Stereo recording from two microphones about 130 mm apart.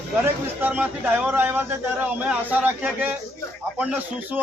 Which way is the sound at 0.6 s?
10° right (ahead or behind).